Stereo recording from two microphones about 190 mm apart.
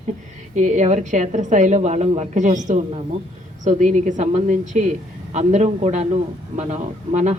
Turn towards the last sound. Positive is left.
turn(degrees=-40)  # may be behind; listen again after turning